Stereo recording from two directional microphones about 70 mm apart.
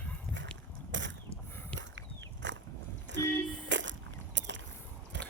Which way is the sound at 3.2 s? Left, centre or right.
Left.